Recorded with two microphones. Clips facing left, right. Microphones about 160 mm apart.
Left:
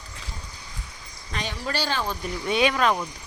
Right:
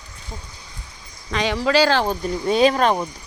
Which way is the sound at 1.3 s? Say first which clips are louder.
Right 11 dB; 90° right.